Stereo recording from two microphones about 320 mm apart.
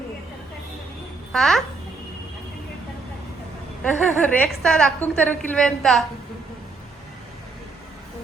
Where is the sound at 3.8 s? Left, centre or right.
Centre.